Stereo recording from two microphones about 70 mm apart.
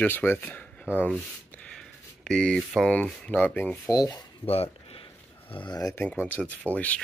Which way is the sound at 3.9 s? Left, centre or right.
Left.